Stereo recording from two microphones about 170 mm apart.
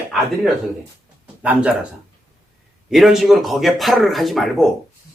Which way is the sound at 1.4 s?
5° right (ahead or behind).